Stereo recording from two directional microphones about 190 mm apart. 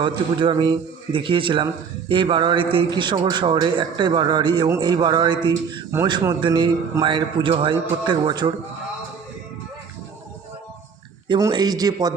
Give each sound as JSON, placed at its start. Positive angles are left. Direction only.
{"t": 0.0, "sound": "a man's voice", "side_deg": -25}
{"t": 11.3, "sound": "a man's voice", "side_deg": -20}